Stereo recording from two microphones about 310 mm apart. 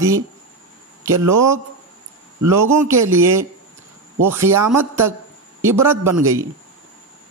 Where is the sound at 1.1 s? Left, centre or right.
Right.